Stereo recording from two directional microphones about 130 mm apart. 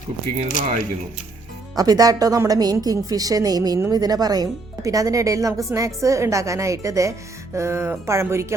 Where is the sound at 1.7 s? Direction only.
30° right (ahead or behind).